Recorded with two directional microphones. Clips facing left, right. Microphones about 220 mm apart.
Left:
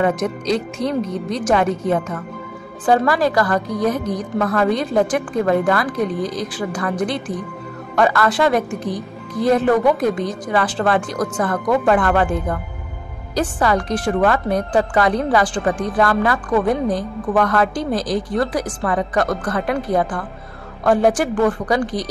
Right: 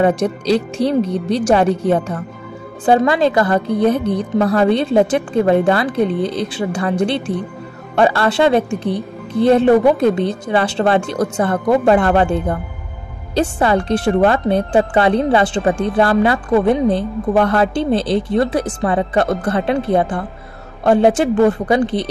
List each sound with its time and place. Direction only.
0.0 s speech: 30° right (ahead or behind)